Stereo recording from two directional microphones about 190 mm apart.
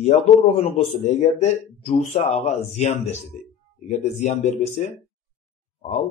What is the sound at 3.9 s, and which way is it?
Speech, 35° left (ahead or behind).